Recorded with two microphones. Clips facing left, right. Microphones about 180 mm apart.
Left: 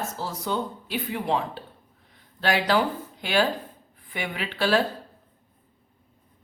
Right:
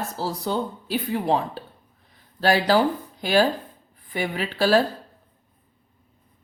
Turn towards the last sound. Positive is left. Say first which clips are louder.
# right 4 dB
turn(degrees=-40)  # may be behind; listen again after turning